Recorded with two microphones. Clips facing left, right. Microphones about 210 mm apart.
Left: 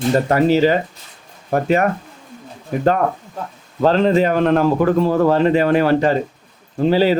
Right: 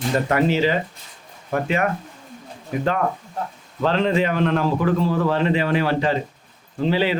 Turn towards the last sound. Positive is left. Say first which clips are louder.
# left 6 dB
turn(degrees=40)  # may be behind; listen again after turning